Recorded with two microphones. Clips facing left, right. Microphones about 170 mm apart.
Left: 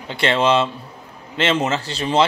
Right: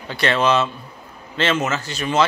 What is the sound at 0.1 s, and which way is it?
Speech, 25° left (ahead or behind).